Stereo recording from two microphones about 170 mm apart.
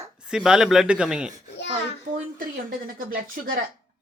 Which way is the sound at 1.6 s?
90° left.